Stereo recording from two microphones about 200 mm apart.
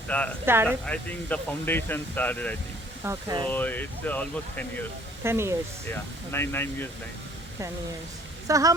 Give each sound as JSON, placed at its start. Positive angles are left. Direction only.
{"t": 0.1, "sound": "speech", "side_deg": 5}
{"t": 0.4, "sound": "speech", "side_deg": -10}
{"t": 0.9, "sound": "speech", "side_deg": 10}
{"t": 3.0, "sound": "speech", "side_deg": -15}
{"t": 3.4, "sound": "speech", "side_deg": 10}
{"t": 5.2, "sound": "speech", "side_deg": -10}
{"t": 5.9, "sound": "speech", "side_deg": 10}
{"t": 8.4, "sound": "speech", "side_deg": -15}